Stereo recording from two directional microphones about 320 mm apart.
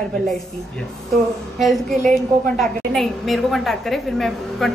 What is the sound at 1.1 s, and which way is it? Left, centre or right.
A woman's voice, centre.